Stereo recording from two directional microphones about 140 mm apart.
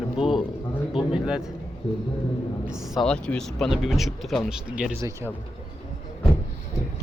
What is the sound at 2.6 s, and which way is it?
Speech, 5° right (ahead or behind).